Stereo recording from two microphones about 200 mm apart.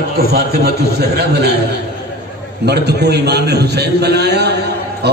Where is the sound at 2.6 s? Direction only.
55° right (ahead or behind).